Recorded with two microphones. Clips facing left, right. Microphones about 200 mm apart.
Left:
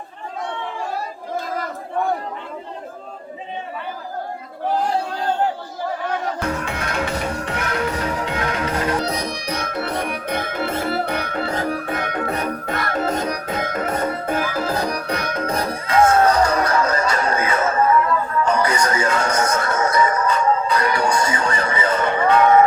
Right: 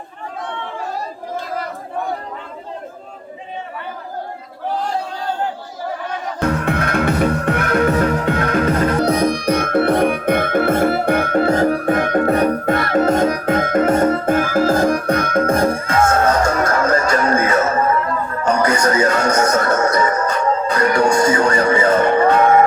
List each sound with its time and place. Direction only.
6.7 s music: 55° right (ahead or behind)